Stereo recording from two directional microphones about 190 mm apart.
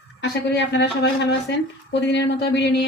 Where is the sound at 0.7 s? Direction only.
65° left (ahead or behind).